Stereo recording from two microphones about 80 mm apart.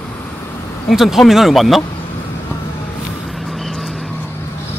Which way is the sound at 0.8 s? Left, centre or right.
Centre.